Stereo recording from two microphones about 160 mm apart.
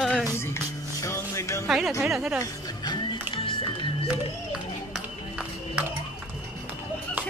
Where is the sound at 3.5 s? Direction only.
30° left (ahead or behind).